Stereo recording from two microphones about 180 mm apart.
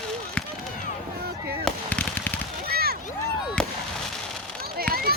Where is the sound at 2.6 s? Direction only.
60° right (ahead or behind).